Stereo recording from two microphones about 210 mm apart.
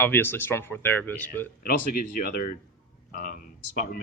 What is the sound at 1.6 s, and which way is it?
Speech, 40° left (ahead or behind).